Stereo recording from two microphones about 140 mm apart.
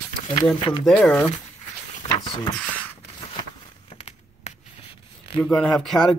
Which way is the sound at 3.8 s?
50° left (ahead or behind).